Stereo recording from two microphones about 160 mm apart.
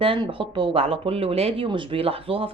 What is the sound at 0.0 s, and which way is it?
Speech, 35° right (ahead or behind).